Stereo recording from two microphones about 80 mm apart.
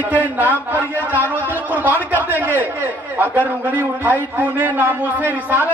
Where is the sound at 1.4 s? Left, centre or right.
Left.